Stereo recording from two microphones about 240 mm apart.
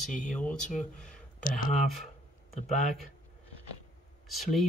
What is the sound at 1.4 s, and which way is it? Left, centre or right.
Speech, left.